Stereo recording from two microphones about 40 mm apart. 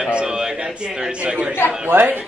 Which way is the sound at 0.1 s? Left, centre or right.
Right.